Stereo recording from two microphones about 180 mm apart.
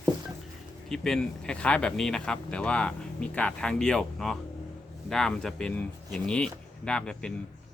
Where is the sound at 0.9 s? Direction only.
5° left (ahead or behind).